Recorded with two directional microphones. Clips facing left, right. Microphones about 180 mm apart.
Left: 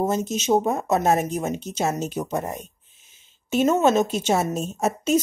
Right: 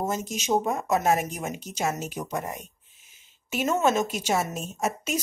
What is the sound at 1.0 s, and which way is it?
A woman's voice, 35° left (ahead or behind).